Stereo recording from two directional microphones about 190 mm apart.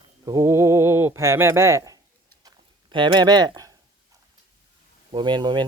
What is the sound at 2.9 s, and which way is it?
Speech, 25° right (ahead or behind).